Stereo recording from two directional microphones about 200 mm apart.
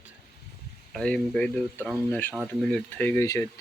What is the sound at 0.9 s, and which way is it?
Speech, centre (ahead or behind).